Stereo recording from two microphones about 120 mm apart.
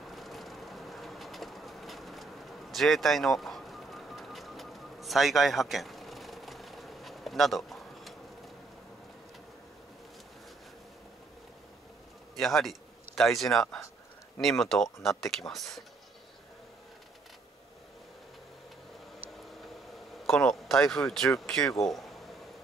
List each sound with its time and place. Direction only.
0.0 s train: centre (ahead or behind)
12.4 s speech: centre (ahead or behind)
20.2 s speech: 5° left (ahead or behind)